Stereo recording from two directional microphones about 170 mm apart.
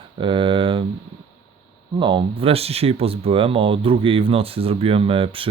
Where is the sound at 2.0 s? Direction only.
30° right (ahead or behind).